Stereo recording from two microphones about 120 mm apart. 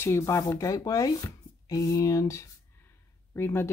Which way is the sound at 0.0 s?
25° left (ahead or behind).